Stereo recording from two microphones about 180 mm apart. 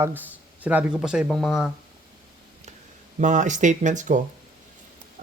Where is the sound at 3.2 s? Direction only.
45° right (ahead or behind).